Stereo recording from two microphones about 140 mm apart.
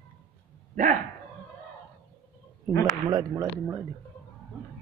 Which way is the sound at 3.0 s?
25° right (ahead or behind).